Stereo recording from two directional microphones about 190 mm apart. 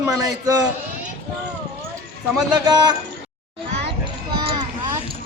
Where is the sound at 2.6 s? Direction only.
20° right (ahead or behind).